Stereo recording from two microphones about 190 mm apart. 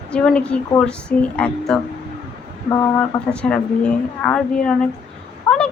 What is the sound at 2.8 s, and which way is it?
Speech, 5° left (ahead or behind).